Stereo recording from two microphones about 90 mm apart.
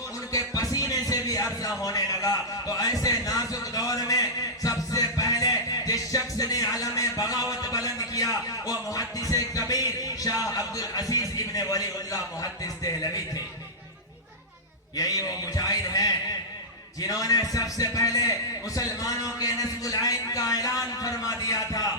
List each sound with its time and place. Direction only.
0.3 s music: 40° left (ahead or behind)
1.8 s a sound: 40° left (ahead or behind)
7.9 s music: 40° left (ahead or behind)
11.1 s a man's voice: 45° left (ahead or behind)
14.9 s a man's voice: 45° left (ahead or behind)